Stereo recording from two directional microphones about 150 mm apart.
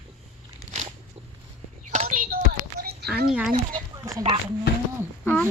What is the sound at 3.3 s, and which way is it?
Speech, 5° right (ahead or behind).